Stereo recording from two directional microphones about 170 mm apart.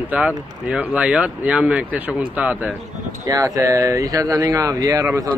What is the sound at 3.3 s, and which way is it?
Speech, 20° right (ahead or behind).